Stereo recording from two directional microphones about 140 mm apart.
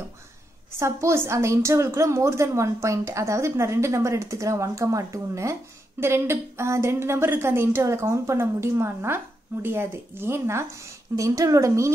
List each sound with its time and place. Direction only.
0.7 s a woman's voice: 20° right (ahead or behind)